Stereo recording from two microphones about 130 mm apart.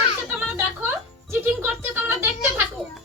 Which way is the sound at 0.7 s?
15° right (ahead or behind).